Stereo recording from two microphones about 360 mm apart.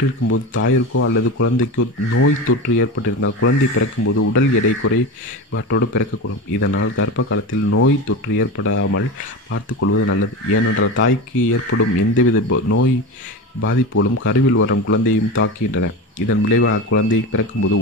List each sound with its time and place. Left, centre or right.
0.3 s speech: left